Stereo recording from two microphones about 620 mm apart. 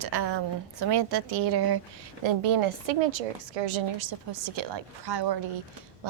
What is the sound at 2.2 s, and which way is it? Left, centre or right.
A woman's voice, right.